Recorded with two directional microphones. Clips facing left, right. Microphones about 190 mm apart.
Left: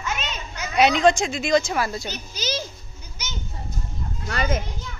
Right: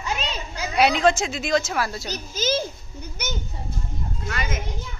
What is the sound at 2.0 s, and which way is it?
Speech, 45° right (ahead or behind).